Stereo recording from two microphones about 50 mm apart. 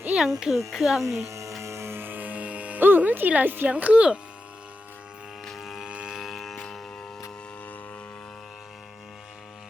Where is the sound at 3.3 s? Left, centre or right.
Right.